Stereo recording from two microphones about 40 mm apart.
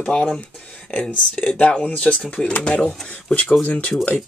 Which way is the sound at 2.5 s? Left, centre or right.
Left.